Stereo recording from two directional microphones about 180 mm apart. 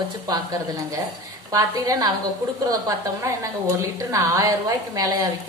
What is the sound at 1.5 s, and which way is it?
Speech, 20° right (ahead or behind).